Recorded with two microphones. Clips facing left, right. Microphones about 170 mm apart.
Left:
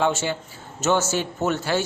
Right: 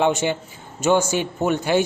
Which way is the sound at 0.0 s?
15° right (ahead or behind).